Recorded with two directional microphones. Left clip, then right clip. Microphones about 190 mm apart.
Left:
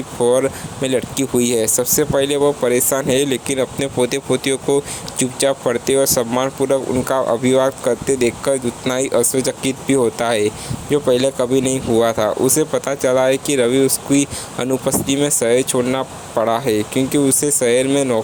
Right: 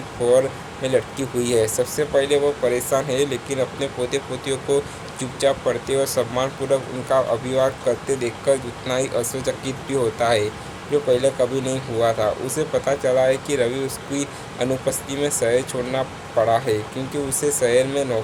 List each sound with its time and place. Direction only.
0.3 s speech: 45° left (ahead or behind)